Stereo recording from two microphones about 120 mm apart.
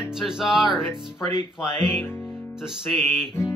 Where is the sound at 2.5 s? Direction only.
5° right (ahead or behind).